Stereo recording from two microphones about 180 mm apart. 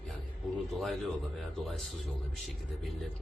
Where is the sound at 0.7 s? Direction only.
Centre (ahead or behind).